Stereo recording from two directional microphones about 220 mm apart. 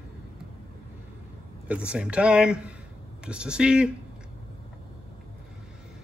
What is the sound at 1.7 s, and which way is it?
Speech, 5° right (ahead or behind).